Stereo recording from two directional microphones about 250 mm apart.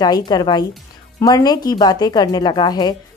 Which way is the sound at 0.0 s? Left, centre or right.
Centre.